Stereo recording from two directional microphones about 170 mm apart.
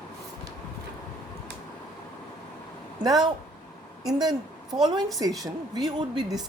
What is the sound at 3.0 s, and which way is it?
Speech, 25° right (ahead or behind).